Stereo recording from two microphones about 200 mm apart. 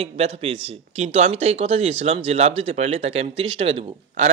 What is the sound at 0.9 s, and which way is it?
Speech, 30° right (ahead or behind).